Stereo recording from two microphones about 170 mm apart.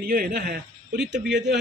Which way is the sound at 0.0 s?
60° right (ahead or behind).